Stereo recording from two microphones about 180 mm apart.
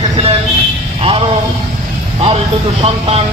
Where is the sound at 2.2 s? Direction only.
35° right (ahead or behind).